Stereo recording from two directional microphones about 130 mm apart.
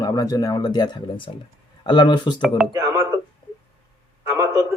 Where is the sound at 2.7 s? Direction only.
25° right (ahead or behind).